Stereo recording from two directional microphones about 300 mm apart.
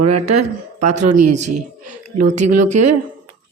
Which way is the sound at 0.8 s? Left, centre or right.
Right.